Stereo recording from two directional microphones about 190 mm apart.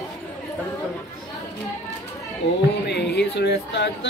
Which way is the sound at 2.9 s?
60° left (ahead or behind).